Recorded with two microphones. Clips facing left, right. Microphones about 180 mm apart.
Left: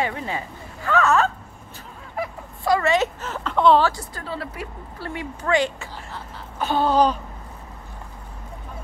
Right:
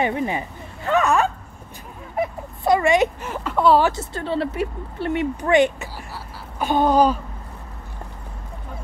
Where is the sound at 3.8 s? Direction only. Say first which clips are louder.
Right 3 dB; 25° right (ahead or behind).